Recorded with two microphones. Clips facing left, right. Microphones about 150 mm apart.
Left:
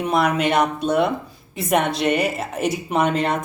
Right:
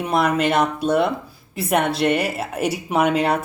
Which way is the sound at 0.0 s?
Centre (ahead or behind).